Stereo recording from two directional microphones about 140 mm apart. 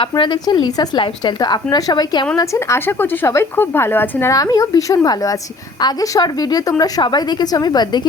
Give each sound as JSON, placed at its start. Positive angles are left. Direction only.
{"t": 0.0, "sound": "a woman's voice", "side_deg": 35}